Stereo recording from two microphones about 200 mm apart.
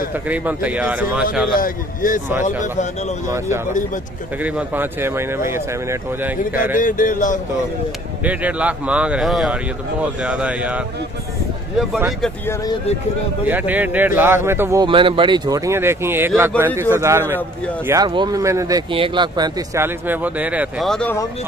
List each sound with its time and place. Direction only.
0.3 s speech: 5° right (ahead or behind)
1.5 s a man's voice: 45° left (ahead or behind)
3.3 s speech: 15° right (ahead or behind)
6.8 s speech: 40° left (ahead or behind)
8.2 s speech: 5° right (ahead or behind)
11.9 s speech: centre (ahead or behind)
13.5 s speech: 10° right (ahead or behind)
14.9 s speech: 25° right (ahead or behind); by 21.2 s 5° left (ahead or behind)